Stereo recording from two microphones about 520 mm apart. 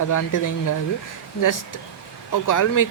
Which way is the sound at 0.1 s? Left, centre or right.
Left.